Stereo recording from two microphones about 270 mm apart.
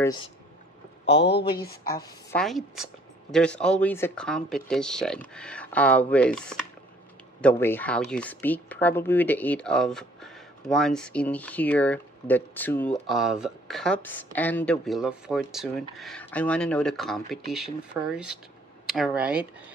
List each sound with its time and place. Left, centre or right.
0.0 s speech: centre
1.0 s speech: left
2.3 s speech: centre